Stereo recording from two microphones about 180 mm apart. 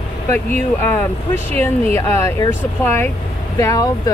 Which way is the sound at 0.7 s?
10° left (ahead or behind).